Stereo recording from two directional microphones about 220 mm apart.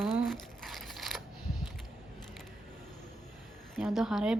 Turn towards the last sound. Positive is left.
turn(degrees=0)  # may be behind; listen again after turning